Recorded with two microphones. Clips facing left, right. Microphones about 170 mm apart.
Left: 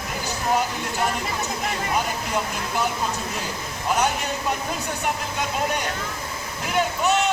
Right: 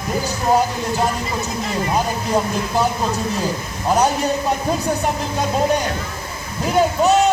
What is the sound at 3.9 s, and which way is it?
Speech, 35° right (ahead or behind).